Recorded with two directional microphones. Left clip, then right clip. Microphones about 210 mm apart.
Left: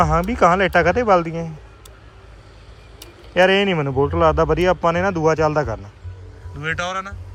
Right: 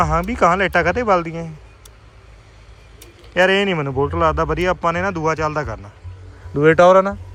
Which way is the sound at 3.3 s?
10° left (ahead or behind).